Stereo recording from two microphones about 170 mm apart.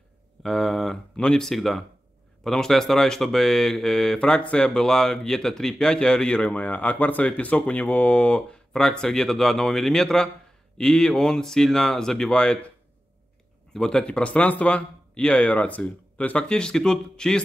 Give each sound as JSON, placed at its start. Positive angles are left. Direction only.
{"t": 0.4, "sound": "speech", "side_deg": 0}
{"t": 13.7, "sound": "speech", "side_deg": 5}